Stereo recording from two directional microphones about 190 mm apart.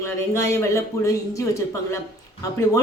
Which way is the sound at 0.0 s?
15° left (ahead or behind).